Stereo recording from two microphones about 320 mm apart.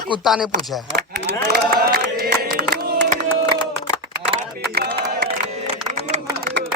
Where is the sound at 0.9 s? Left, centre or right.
Right.